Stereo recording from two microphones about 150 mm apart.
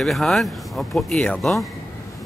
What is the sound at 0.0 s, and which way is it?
Speech, centre (ahead or behind).